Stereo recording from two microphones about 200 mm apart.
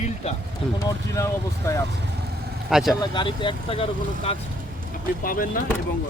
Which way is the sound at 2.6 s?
Centre (ahead or behind).